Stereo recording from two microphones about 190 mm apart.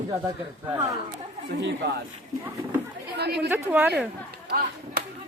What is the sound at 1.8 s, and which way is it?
Speech, 65° right (ahead or behind).